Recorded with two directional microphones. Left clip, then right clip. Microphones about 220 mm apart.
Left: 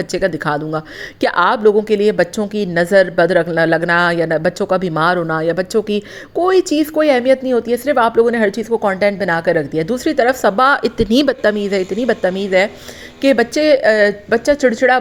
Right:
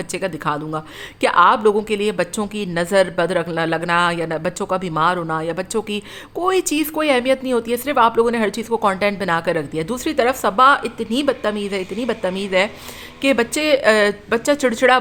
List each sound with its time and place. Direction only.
0.1 s a woman's voice: 15° left (ahead or behind)